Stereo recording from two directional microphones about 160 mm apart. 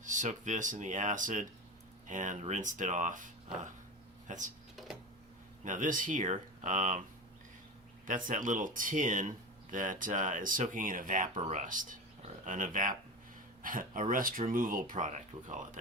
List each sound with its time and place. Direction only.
0.0 s speech: 50° right (ahead or behind)
5.6 s speech: 50° right (ahead or behind)
8.0 s speech: 55° right (ahead or behind)